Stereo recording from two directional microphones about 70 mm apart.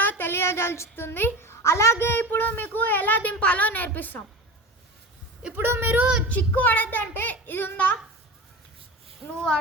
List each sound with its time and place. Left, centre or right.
0.0 s a child's voice: left
5.5 s a child's voice: right
6.2 s a child's voice: left